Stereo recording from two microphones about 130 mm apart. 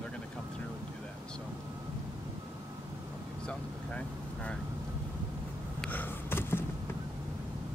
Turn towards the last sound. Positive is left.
turn(degrees=15)  # may be behind; listen again after turning